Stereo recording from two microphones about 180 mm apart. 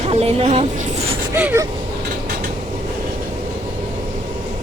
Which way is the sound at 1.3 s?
15° right (ahead or behind).